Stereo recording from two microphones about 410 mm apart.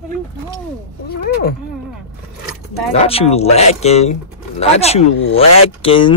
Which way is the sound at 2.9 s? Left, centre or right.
Centre.